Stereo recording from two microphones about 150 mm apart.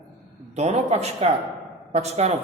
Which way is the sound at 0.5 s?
45° right (ahead or behind).